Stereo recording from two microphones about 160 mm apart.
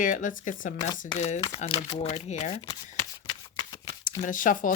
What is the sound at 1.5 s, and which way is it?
Speech, 40° left (ahead or behind).